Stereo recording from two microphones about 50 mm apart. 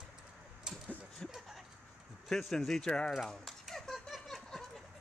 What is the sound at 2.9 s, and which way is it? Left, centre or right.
Speech, centre.